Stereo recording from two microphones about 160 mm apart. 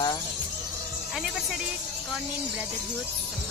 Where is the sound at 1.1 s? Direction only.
5° right (ahead or behind).